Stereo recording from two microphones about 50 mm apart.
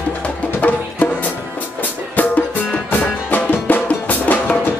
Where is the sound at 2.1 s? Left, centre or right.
Left.